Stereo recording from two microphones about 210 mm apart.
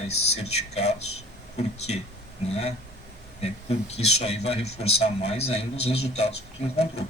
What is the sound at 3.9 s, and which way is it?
Speech, 30° left (ahead or behind).